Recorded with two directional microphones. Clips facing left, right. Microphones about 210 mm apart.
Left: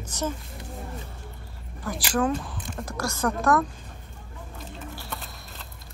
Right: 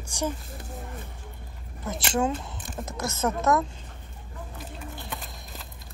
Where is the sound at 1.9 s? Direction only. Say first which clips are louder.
Left 1 dB; 25° right (ahead or behind).